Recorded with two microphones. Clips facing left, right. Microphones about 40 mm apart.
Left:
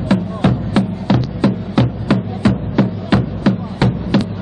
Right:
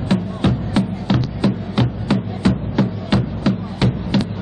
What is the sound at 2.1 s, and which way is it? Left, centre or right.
Music, centre.